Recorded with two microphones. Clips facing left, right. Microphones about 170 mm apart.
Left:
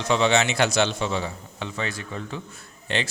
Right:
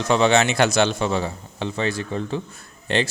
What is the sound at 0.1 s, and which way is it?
A man's voice, 50° right (ahead or behind).